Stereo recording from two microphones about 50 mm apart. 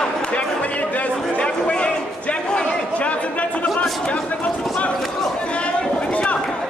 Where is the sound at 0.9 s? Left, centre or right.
Left.